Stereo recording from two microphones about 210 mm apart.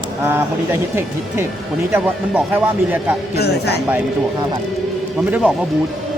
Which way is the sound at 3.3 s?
50° left (ahead or behind).